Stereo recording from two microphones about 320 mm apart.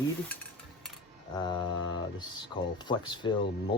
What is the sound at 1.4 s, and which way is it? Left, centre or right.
Mantra, centre.